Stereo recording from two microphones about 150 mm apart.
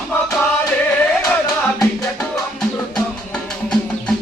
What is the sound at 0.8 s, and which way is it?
Music, 5° left (ahead or behind).